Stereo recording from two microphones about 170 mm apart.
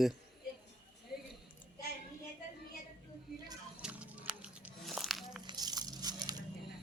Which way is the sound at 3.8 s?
5° right (ahead or behind).